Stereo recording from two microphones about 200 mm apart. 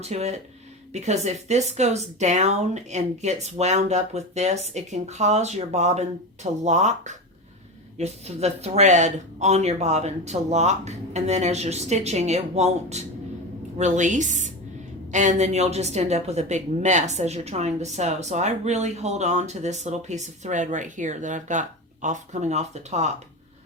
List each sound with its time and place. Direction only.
0.0 s a woman's voice: 35° right (ahead or behind)